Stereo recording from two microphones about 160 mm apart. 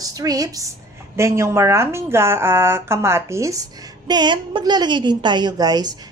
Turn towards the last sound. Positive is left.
turn(degrees=-25)  # may be behind; listen again after turning